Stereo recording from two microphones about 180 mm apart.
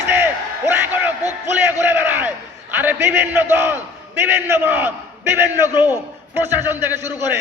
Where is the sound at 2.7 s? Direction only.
10° right (ahead or behind).